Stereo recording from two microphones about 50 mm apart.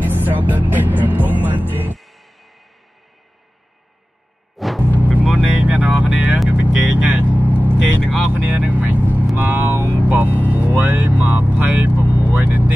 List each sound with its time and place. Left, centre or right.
0.0 s music: right
2.0 s music: centre
4.6 s music: centre
5.0 s vehicle: right